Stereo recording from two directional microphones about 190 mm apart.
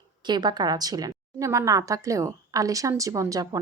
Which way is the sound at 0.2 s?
25° right (ahead or behind).